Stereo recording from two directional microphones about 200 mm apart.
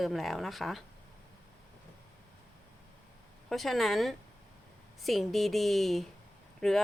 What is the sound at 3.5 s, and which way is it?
A woman's voice, centre (ahead or behind).